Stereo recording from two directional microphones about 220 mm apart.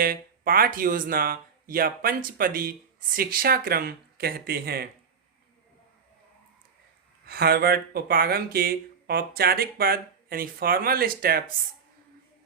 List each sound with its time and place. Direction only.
0.0 s speech: 40° right (ahead or behind)
7.3 s speech: 45° right (ahead or behind)